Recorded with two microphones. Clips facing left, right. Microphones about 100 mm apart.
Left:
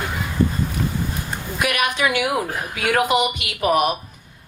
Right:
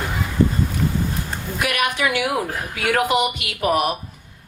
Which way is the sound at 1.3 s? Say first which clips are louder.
Left 1 dB; 20° left (ahead or behind).